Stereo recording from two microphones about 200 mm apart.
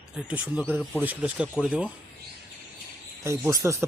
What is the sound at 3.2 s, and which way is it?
Speech, 15° right (ahead or behind).